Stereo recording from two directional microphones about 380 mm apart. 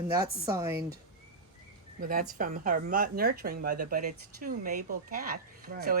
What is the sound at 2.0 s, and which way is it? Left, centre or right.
Speech, right.